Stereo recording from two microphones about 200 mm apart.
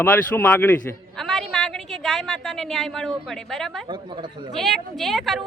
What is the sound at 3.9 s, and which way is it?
Speech, 25° right (ahead or behind).